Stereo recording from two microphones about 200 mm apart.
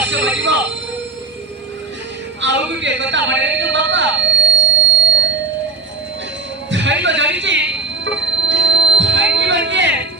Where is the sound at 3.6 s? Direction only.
65° right (ahead or behind).